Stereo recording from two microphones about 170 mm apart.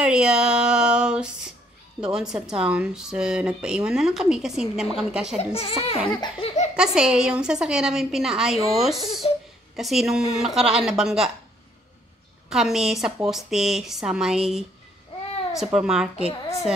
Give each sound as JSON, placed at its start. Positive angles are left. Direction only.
{"t": 0.0, "sound": "a sound", "side_deg": -5}
{"t": 2.0, "sound": "speech", "side_deg": -5}
{"t": 5.4, "sound": "a child's voice", "side_deg": 35}
{"t": 5.9, "sound": "baby laughter", "side_deg": 30}
{"t": 6.4, "sound": "a sound", "side_deg": 40}
{"t": 6.7, "sound": "speech", "side_deg": -5}
{"t": 9.2, "sound": "a sound", "side_deg": 35}
{"t": 9.8, "sound": "speech", "side_deg": 0}
{"t": 12.4, "sound": "speech", "side_deg": 0}
{"t": 15.6, "sound": "speech", "side_deg": -5}